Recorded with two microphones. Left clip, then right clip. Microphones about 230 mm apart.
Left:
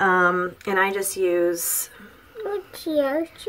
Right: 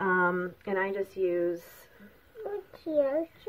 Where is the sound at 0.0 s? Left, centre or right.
Centre.